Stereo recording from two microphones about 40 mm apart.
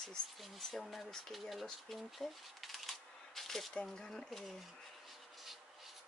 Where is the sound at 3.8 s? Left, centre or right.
Centre.